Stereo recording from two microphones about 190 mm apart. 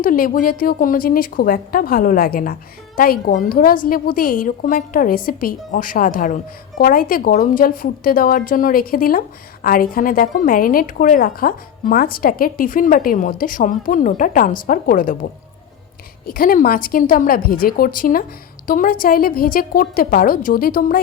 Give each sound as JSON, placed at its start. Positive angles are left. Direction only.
{"t": 0.0, "sound": "a woman's voice", "side_deg": 45}